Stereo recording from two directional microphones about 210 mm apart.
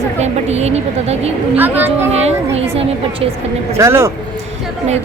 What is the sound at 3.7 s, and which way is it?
Speech, 15° right (ahead or behind).